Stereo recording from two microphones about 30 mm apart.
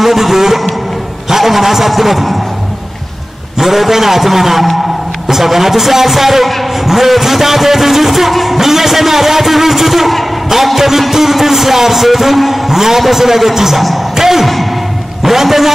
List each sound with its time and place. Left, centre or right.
0.0 s vehicle: centre
1.3 s a man's voice: centre
3.5 s a man's voice: centre
14.1 s a sound: centre
14.4 s a sound: centre
15.2 s speech: centre